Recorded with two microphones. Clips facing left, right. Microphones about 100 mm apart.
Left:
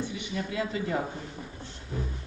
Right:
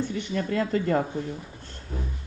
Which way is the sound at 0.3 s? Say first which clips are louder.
Right 6 dB; 55° right (ahead or behind).